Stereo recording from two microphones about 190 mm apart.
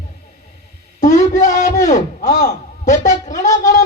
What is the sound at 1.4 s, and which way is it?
Speech, 40° left (ahead or behind).